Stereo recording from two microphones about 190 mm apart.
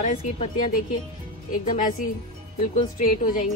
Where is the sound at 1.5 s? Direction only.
45° left (ahead or behind).